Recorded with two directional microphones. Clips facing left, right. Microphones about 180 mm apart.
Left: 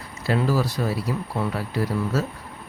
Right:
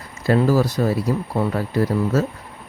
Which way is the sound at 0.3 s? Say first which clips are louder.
Right 6 dB; 45° right (ahead or behind).